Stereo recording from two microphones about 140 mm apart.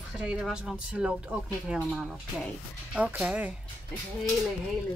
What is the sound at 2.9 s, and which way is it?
Speech, 10° right (ahead or behind).